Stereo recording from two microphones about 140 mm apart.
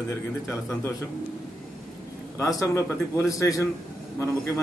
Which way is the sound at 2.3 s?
20° left (ahead or behind).